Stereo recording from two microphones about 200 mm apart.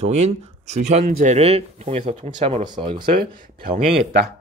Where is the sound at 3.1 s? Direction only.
45° right (ahead or behind).